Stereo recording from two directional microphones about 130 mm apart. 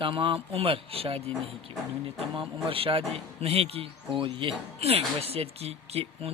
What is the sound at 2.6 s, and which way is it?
A man's voice, 45° right (ahead or behind).